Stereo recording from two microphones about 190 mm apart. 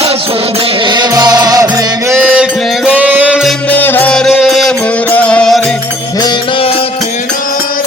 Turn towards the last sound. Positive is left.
turn(degrees=25)  # may be behind; listen again after turning